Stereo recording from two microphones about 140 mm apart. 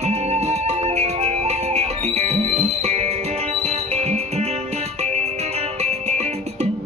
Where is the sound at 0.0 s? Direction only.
50° right (ahead or behind).